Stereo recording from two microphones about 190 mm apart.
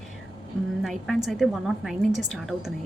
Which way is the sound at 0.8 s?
Centre (ahead or behind).